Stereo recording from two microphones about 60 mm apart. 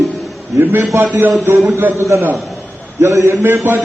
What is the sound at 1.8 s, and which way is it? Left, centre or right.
A man's voice, right.